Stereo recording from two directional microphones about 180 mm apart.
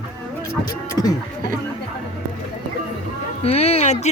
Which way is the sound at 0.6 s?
20° left (ahead or behind).